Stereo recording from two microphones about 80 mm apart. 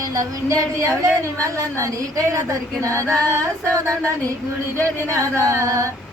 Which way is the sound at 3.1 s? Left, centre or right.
Right.